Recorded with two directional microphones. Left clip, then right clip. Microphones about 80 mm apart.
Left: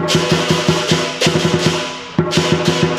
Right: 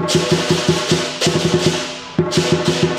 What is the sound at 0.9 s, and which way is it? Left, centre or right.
Music, left.